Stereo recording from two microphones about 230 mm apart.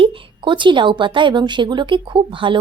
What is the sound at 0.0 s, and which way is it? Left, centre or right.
A woman's voice, right.